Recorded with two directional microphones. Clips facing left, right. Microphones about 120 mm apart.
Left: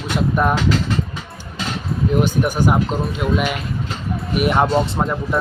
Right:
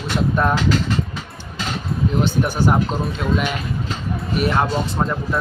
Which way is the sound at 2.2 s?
5° left (ahead or behind).